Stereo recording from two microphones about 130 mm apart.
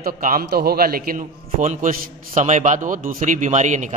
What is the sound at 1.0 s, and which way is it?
A man's voice, 80° right.